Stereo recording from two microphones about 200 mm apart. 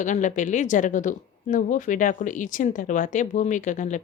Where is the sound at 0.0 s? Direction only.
40° left (ahead or behind).